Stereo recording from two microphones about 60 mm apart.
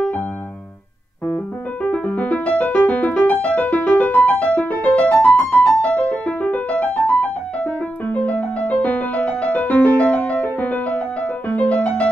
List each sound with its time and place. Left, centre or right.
1.2 s keyboard: left
5.3 s music: left